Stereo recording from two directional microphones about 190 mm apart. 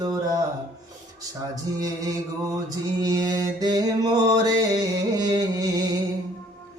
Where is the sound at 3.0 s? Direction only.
20° right (ahead or behind).